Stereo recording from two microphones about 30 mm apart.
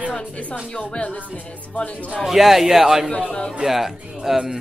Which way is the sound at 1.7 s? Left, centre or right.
Left.